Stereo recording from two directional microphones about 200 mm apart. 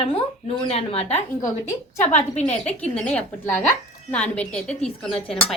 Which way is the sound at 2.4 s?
35° left (ahead or behind).